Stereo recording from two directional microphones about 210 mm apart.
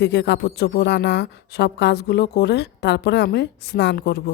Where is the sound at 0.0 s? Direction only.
55° left (ahead or behind).